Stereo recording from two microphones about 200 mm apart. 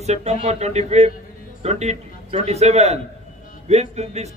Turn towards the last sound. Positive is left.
turn(degrees=-35)  # may be behind; listen again after turning